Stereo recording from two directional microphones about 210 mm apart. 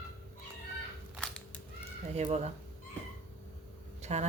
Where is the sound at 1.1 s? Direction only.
5° left (ahead or behind).